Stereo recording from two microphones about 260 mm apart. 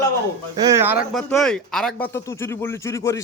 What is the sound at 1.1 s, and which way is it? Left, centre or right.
A man's voice, centre.